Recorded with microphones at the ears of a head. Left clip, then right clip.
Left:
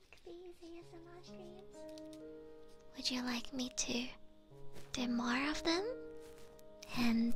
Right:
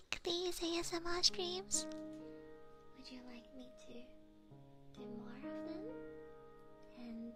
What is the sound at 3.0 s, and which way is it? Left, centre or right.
Speech, left.